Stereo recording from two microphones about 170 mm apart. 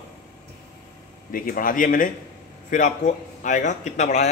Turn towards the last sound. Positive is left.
turn(degrees=45)  # may be behind; listen again after turning